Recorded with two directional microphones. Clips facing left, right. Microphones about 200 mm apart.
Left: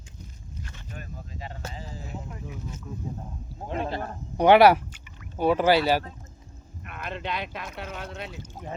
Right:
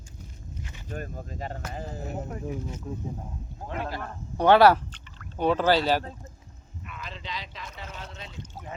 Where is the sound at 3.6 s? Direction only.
25° left (ahead or behind).